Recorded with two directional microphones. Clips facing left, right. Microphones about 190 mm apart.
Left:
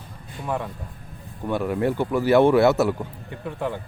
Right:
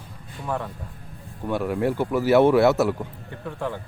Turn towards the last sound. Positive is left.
turn(degrees=15)  # may be behind; listen again after turning